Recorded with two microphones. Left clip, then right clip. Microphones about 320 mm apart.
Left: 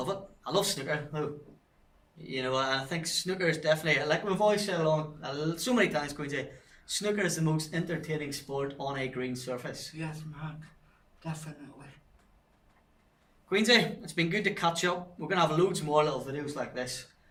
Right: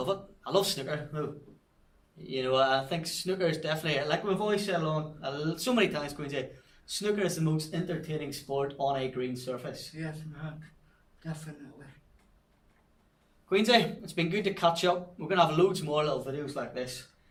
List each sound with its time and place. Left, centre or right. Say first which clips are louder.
0.0 s speech: right 2 dB; centre
2.3 s speech: right 4 dB; centre
13.5 s speech: even; centre